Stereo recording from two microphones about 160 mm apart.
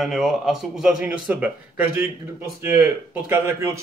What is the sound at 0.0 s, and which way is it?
Speech, centre (ahead or behind).